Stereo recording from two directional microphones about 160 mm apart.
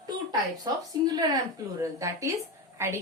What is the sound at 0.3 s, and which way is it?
A woman's voice, 25° right (ahead or behind).